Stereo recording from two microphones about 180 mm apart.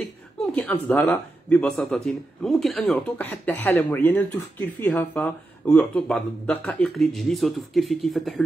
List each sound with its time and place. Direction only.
0.6 s speech: 10° left (ahead or behind)